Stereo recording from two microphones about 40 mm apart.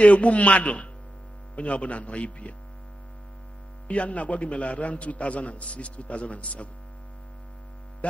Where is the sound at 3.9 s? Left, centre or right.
Left.